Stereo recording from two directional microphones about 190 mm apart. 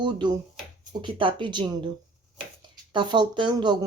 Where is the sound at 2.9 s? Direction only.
25° right (ahead or behind).